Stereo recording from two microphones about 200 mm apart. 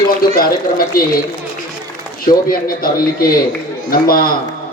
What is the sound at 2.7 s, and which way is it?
A man's voice, 45° left (ahead or behind).